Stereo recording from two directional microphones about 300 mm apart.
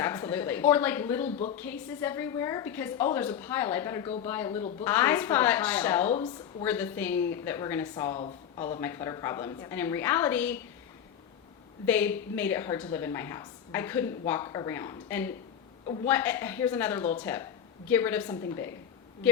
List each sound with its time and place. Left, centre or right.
0.0 s a woman's voice: centre
1.3 s a woman's voice: left
1.5 s a woman's voice: centre
11.9 s a woman's voice: centre